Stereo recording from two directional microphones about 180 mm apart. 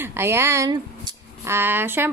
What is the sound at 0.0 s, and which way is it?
A woman's voice, 15° right (ahead or behind).